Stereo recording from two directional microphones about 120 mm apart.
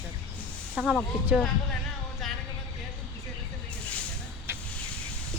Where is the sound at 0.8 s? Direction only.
5° right (ahead or behind).